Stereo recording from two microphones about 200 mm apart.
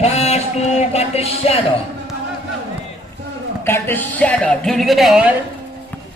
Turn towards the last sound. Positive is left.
turn(degrees=-5)  # may be behind; listen again after turning